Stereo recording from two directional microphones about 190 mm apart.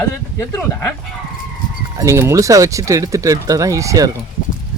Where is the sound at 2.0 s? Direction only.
15° right (ahead or behind).